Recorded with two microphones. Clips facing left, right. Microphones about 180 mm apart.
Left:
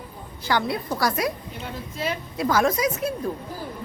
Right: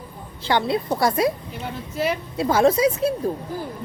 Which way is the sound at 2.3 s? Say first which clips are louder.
Right 4 dB; 25° right (ahead or behind).